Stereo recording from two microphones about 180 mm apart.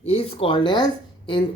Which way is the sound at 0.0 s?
35° left (ahead or behind).